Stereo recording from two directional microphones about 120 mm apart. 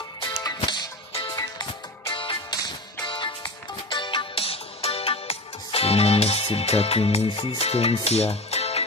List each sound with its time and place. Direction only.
0.3 s music: 30° left (ahead or behind)
0.6 s music: 45° left (ahead or behind); by 8.8 s 60° left (ahead or behind)